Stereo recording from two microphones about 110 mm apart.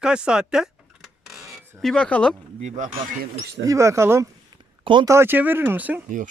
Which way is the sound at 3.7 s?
25° right (ahead or behind).